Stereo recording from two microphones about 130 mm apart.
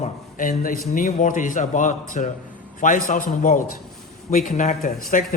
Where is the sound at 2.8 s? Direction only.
90° left.